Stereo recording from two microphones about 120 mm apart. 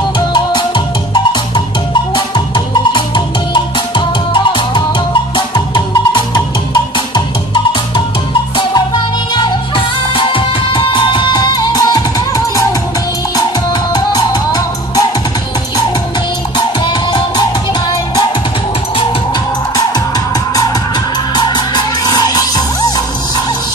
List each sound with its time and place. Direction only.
0.3 s music: 40° left (ahead or behind)
6.1 s music: 35° left (ahead or behind)
9.3 s music: 40° left (ahead or behind)
13.9 s music: 35° left (ahead or behind)
16.5 s music: 35° left (ahead or behind)
21.5 s music: 35° left (ahead or behind)